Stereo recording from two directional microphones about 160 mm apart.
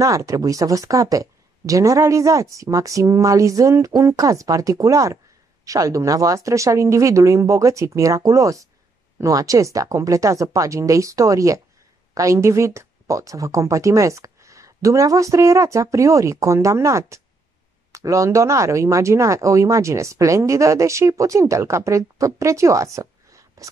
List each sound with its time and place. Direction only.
0.0 s speech: 20° right (ahead or behind)